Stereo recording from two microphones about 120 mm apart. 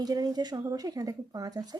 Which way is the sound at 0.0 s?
35° right (ahead or behind).